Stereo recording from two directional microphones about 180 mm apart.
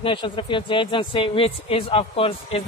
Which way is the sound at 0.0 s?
30° left (ahead or behind).